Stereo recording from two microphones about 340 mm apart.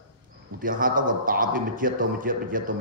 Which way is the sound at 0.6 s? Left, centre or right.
Right.